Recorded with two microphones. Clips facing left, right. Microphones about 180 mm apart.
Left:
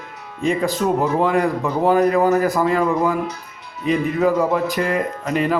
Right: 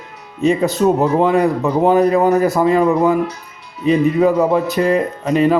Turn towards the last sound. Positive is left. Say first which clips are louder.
# right 6 dB
turn(degrees=-20)  # may be behind; listen again after turning